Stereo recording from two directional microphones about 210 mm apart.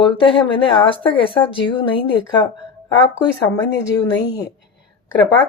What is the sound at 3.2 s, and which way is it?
Speech, 15° left (ahead or behind).